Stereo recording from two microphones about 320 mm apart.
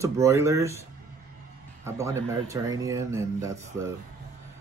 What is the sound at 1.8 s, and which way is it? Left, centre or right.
Speech, centre.